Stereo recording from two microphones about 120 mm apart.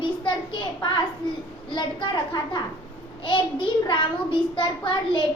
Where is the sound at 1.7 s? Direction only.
40° left (ahead or behind).